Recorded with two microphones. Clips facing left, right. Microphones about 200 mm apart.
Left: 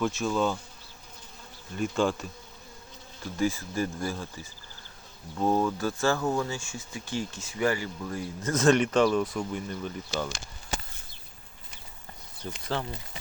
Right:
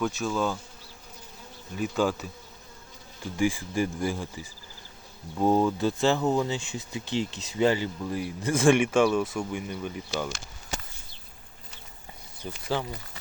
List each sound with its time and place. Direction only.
0.0 s bee: centre (ahead or behind)
1.7 s bee: 5° right (ahead or behind)
3.3 s speech: 15° right (ahead or behind)
5.4 s speech: 15° right (ahead or behind)
12.4 s speech: 15° right (ahead or behind)